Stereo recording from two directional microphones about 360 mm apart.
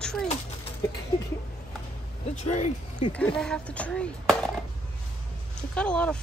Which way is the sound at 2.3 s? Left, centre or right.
Centre.